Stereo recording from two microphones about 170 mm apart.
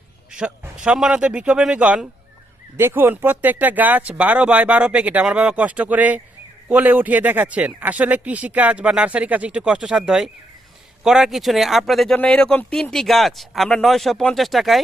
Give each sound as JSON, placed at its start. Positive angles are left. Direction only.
{"t": 0.3, "sound": "a man's voice", "side_deg": -5}